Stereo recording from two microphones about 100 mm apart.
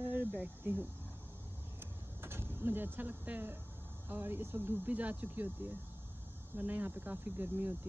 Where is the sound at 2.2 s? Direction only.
25° right (ahead or behind).